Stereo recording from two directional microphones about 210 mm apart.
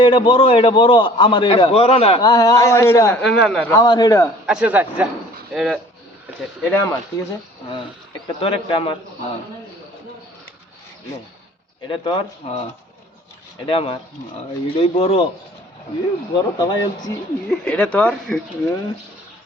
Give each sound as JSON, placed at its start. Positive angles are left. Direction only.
{"t": 0.0, "sound": "a man's voice", "side_deg": 25}
{"t": 3.8, "sound": "speech", "side_deg": 20}
{"t": 4.4, "sound": "speech", "side_deg": -5}
{"t": 5.5, "sound": "speech", "side_deg": 5}
{"t": 8.4, "sound": "a man's voice", "side_deg": 25}
{"t": 11.9, "sound": "a man's voice", "side_deg": 25}
{"t": 13.7, "sound": "a man's voice", "side_deg": 25}
{"t": 16.3, "sound": "a man's voice", "side_deg": 20}
{"t": 17.5, "sound": "speech", "side_deg": 5}